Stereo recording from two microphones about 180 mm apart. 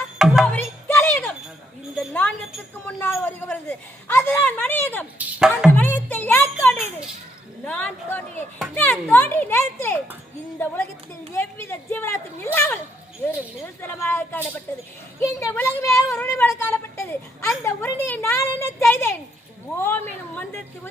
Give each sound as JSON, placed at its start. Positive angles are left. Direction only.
{"t": 0.4, "sound": "music", "side_deg": 10}
{"t": 2.0, "sound": "a sound", "side_deg": 5}
{"t": 2.8, "sound": "a man's voice", "side_deg": 10}
{"t": 5.7, "sound": "music", "side_deg": 10}
{"t": 7.6, "sound": "a man's voice", "side_deg": 10}
{"t": 16.2, "sound": "a sound", "side_deg": 15}
{"t": 17.6, "sound": "a man's voice", "side_deg": 15}